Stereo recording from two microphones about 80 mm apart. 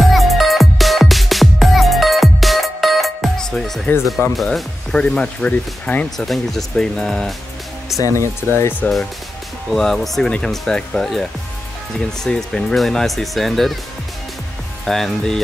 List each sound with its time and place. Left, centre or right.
0.1 s music: centre
4.4 s speech: centre
6.0 s speech: centre
8.0 s speech: left
9.7 s speech: centre
14.9 s speech: centre